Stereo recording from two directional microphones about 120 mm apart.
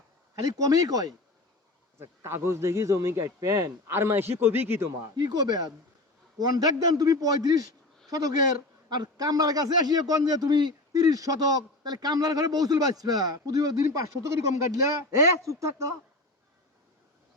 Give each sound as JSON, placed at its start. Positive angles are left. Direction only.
{"t": 0.3, "sound": "a man's voice", "side_deg": -30}
{"t": 5.1, "sound": "a man's voice", "side_deg": -35}